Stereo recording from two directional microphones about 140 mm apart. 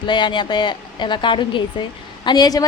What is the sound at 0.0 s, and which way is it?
A woman's voice, 35° left (ahead or behind).